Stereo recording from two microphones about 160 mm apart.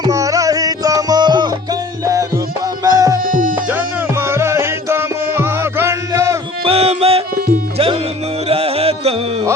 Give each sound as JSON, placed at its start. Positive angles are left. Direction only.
{"t": 0.0, "sound": "music", "side_deg": -20}
{"t": 2.8, "sound": "music", "side_deg": -20}
{"t": 3.2, "sound": "music", "side_deg": -60}
{"t": 3.7, "sound": "music", "side_deg": -15}
{"t": 6.7, "sound": "music", "side_deg": -40}
{"t": 8.4, "sound": "music", "side_deg": -35}